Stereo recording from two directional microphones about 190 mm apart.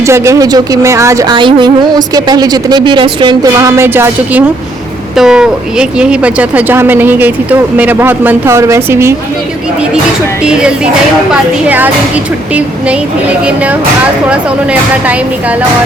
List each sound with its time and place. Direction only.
0.0 s speech: 15° right (ahead or behind)
10.4 s speech: 5° right (ahead or behind)